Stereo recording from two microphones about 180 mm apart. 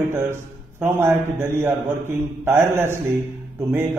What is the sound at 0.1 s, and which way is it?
A man's voice, 15° right (ahead or behind).